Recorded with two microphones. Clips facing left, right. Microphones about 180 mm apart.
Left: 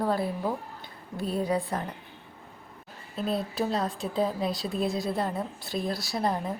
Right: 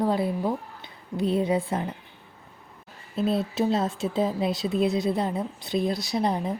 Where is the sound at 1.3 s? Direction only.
25° right (ahead or behind).